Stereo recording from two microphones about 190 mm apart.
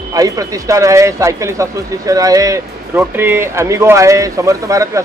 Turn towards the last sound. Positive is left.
turn(degrees=-15)  # may be behind; listen again after turning